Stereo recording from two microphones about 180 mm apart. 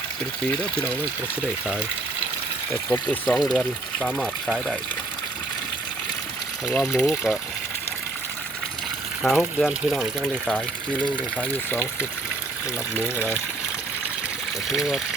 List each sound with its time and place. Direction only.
2.9 s speech: 5° left (ahead or behind)
6.7 s speech: centre (ahead or behind)
9.2 s speech: centre (ahead or behind)
14.7 s speech: centre (ahead or behind)